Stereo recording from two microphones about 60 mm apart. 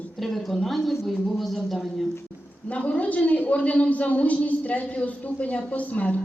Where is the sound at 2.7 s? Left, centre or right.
Left.